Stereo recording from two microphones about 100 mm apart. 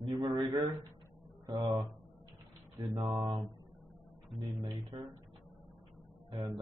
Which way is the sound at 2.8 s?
45° right (ahead or behind).